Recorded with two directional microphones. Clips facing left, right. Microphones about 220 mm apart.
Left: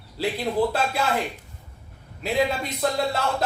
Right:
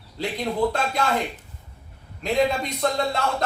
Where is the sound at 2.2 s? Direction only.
5° left (ahead or behind).